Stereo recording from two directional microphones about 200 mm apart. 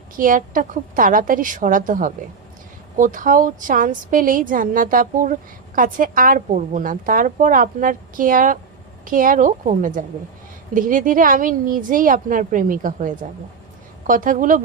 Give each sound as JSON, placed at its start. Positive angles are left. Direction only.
{"t": 0.2, "sound": "a woman's voice", "side_deg": -45}